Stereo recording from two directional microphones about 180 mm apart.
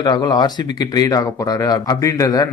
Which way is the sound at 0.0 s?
25° left (ahead or behind).